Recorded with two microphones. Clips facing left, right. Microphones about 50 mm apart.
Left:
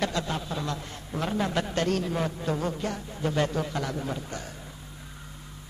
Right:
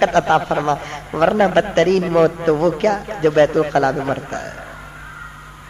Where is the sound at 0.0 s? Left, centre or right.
Right.